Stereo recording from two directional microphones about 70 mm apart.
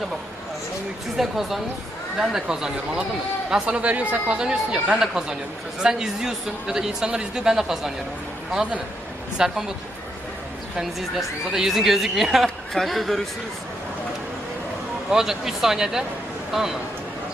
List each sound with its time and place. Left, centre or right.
1.1 s a woman's voice: centre
9.4 s speech: centre
10.8 s a woman's voice: centre
15.1 s a woman's voice: centre